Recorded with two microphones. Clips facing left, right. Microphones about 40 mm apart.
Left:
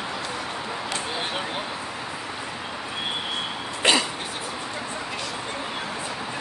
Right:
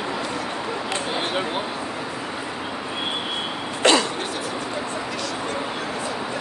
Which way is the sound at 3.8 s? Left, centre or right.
Centre.